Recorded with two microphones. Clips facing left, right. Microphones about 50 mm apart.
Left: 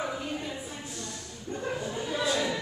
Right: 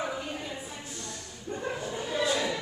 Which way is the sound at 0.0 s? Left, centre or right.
Centre.